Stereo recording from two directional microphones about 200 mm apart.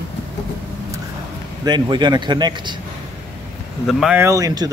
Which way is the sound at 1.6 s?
20° right (ahead or behind).